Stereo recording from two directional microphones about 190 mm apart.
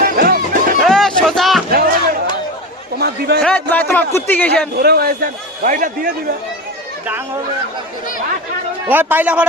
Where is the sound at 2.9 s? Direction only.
55° right (ahead or behind).